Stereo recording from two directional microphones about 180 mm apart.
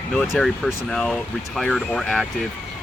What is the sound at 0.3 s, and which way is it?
Speech, centre (ahead or behind).